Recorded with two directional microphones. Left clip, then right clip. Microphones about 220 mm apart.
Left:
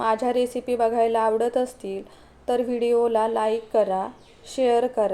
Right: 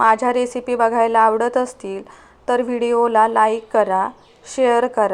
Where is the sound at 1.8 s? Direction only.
40° right (ahead or behind).